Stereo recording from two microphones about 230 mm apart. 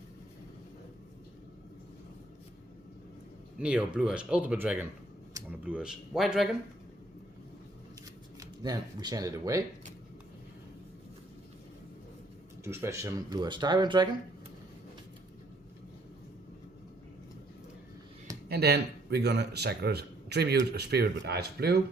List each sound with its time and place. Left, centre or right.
3.6 s speech: centre
8.4 s speech: centre
12.6 s speech: centre
18.4 s a man's voice: right